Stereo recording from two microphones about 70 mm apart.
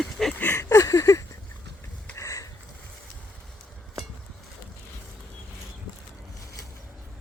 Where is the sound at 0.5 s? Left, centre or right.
Left.